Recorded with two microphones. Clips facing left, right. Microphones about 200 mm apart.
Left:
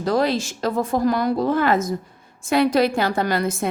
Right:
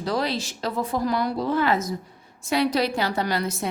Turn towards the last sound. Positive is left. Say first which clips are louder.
# left 4 dB
turn(degrees=50)  # may be behind; listen again after turning